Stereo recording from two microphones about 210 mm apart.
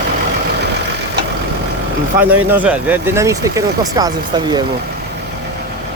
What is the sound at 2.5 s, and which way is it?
Speech, 5° right (ahead or behind).